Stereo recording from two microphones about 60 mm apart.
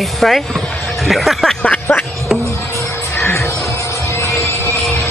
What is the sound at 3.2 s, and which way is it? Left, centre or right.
Music, left.